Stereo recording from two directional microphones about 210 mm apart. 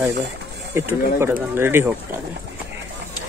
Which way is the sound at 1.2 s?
10° right (ahead or behind).